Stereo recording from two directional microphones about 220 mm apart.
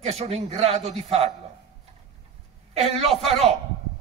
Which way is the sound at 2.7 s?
30° right (ahead or behind).